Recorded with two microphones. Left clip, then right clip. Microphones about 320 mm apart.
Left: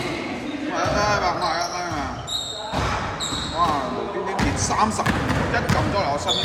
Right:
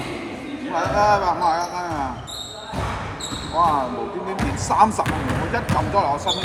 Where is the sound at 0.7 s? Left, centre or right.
Centre.